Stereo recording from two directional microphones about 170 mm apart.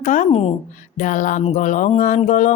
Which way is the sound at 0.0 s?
45° left (ahead or behind).